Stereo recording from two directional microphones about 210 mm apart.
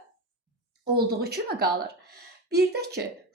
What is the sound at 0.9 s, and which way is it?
Speech, 45° right (ahead or behind).